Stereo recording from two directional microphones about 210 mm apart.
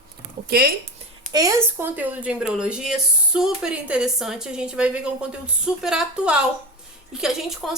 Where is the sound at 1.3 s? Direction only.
15° right (ahead or behind).